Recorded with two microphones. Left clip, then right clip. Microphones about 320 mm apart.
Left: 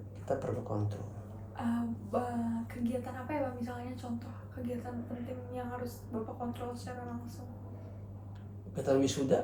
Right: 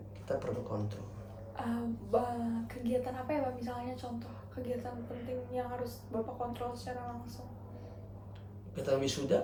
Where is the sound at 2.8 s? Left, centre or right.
Right.